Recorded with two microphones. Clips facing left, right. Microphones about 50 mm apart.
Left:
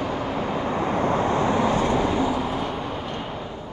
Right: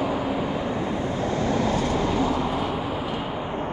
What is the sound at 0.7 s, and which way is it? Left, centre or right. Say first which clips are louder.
Vehicle: left 4 dB; left.